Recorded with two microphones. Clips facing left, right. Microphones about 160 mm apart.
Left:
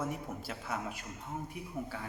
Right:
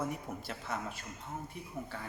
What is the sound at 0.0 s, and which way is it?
A man's voice, 5° left (ahead or behind).